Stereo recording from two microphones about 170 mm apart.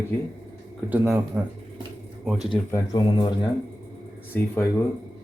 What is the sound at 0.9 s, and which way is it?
Speech, 10° right (ahead or behind).